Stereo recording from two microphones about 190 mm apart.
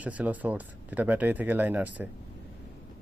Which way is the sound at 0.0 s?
10° right (ahead or behind).